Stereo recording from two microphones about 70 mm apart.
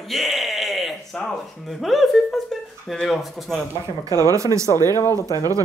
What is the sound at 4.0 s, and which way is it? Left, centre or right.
Speech, right.